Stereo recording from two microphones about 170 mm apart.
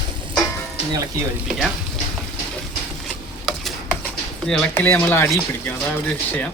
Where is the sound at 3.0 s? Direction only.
Centre (ahead or behind).